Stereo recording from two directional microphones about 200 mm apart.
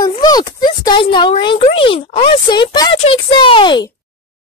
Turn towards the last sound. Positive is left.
turn(degrees=25)  # may be behind; listen again after turning